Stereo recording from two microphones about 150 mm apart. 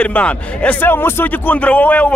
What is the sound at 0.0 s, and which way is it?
A man's voice, 10° left (ahead or behind).